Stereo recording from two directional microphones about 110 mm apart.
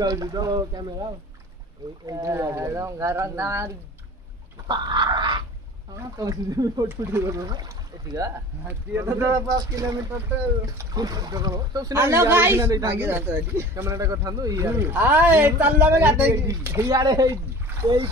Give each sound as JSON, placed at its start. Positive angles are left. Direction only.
{"t": 0.0, "sound": "speech", "side_deg": -35}
{"t": 2.0, "sound": "a man's voice", "side_deg": -35}
{"t": 4.6, "sound": "speech", "side_deg": -40}
{"t": 6.9, "sound": "a man's voice", "side_deg": -20}
{"t": 8.6, "sound": "a man's voice", "side_deg": -25}
{"t": 11.9, "sound": "a man's voice", "side_deg": -25}
{"t": 16.9, "sound": "speech", "side_deg": -35}
{"t": 17.8, "sound": "speech", "side_deg": -55}